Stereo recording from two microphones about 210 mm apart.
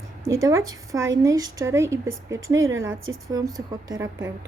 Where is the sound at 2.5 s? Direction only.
70° right (ahead or behind).